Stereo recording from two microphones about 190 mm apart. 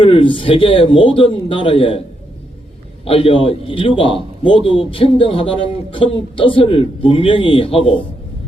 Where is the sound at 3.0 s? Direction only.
30° left (ahead or behind).